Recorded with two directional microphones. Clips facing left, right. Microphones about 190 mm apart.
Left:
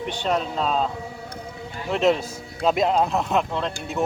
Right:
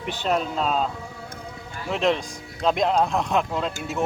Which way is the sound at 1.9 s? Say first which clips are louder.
Left 3 dB; centre (ahead or behind).